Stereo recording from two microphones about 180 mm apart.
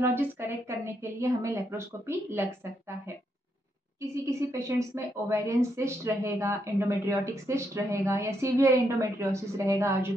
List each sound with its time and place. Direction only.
0.0 s a woman's voice: 10° right (ahead or behind)
4.1 s a woman's voice: 15° right (ahead or behind)